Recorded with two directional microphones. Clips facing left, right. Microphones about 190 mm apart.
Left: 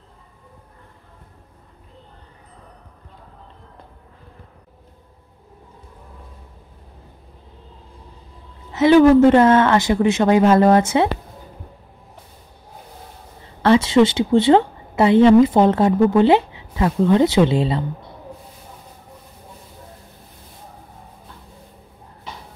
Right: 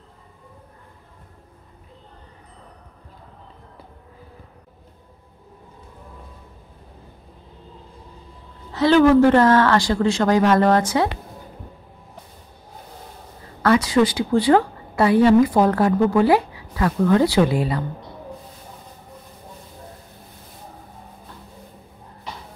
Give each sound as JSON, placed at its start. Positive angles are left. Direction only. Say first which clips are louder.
{"t": 8.7, "sound": "a woman's voice", "louder": "left 3 dB", "side_deg": 20}
{"t": 13.6, "sound": "a woman's voice", "louder": "left 3 dB", "side_deg": 25}